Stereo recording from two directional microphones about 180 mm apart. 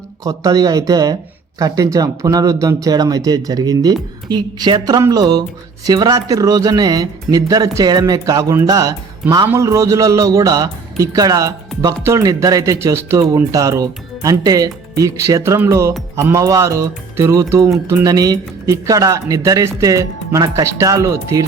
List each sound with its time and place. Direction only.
0.3 s speech: 20° right (ahead or behind)